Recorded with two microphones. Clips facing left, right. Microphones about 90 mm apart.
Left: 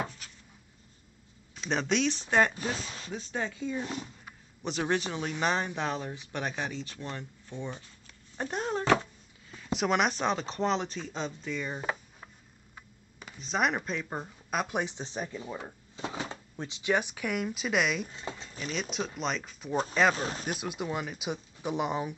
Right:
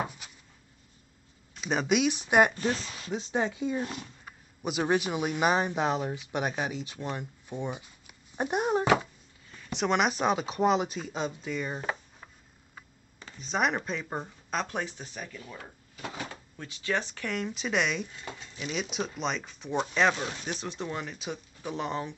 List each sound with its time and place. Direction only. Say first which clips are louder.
0.0 s a sound: right 2 dB; 15° right (ahead or behind)
1.5 s speech: right 2 dB; 5° right (ahead or behind)
2.5 s speech: right 4 dB; 5° left (ahead or behind)
3.1 s speech: right 6 dB; 20° right (ahead or behind)
3.8 s speech: even; 5° right (ahead or behind)
9.5 s speech: even; 5° left (ahead or behind)
13.4 s speech: right 1 dB; centre (ahead or behind)
14.5 s speech: left 1 dB; 10° left (ahead or behind)
18.1 s speech: left 2 dB; 30° left (ahead or behind)
18.6 s speech: right 2 dB; 5° right (ahead or behind)
20.2 s speech: left 1 dB; 35° left (ahead or behind)
20.4 s speech: left 1 dB; 10° left (ahead or behind)